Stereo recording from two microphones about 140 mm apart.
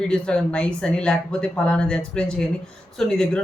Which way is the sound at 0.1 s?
5° left (ahead or behind).